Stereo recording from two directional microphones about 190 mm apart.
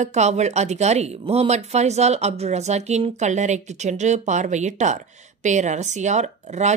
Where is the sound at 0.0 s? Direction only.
35° right (ahead or behind).